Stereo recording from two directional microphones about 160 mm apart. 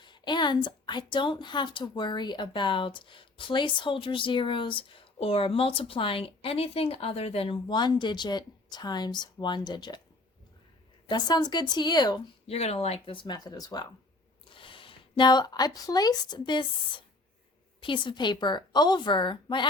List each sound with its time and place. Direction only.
0.0 s a woman's voice: 30° left (ahead or behind)
11.1 s a woman's voice: 25° left (ahead or behind)
12.5 s a woman's voice: 40° left (ahead or behind)
17.7 s a woman's voice: 30° left (ahead or behind)